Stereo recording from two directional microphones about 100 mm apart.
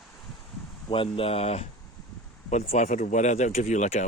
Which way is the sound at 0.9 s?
65° left (ahead or behind).